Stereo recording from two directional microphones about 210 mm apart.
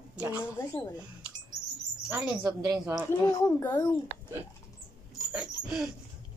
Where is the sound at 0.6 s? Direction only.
10° left (ahead or behind).